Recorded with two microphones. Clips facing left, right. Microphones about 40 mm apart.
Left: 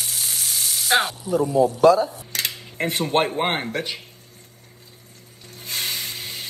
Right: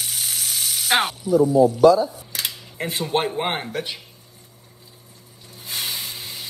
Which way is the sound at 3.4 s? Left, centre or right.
Centre.